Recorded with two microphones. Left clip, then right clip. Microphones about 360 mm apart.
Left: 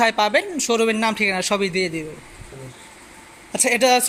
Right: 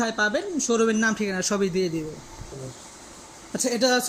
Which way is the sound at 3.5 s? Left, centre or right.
Centre.